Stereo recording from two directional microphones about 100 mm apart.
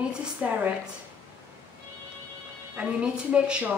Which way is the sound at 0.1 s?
10° right (ahead or behind).